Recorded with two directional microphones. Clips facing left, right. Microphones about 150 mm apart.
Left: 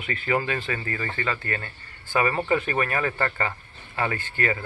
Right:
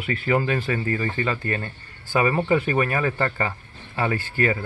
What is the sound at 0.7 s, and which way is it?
Speech, 25° right (ahead or behind).